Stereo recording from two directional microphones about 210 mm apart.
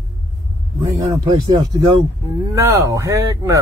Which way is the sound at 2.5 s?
10° right (ahead or behind).